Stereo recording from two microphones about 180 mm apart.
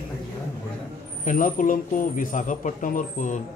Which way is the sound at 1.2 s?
50° left (ahead or behind).